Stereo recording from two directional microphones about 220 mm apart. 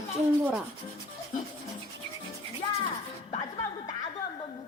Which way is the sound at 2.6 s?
20° left (ahead or behind).